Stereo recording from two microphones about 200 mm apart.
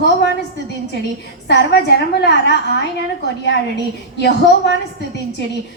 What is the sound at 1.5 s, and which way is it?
A woman's voice, 55° left (ahead or behind).